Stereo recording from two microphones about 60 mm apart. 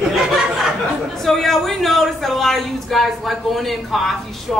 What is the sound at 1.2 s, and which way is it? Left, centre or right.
Speech, centre.